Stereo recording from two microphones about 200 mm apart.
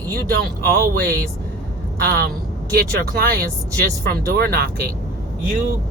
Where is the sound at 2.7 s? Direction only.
50° right (ahead or behind).